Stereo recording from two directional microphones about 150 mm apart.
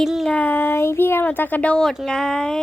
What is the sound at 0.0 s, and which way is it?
Speech, centre (ahead or behind).